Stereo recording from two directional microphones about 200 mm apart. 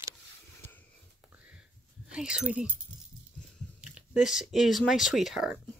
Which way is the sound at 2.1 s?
5° right (ahead or behind).